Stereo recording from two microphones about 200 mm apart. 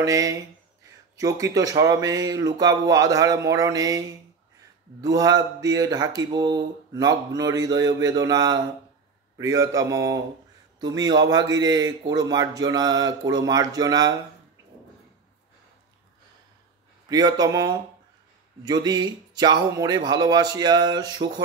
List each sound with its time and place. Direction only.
0.0 s speech: 15° right (ahead or behind)
5.0 s speech: 20° right (ahead or behind)
17.1 s speech: 20° right (ahead or behind)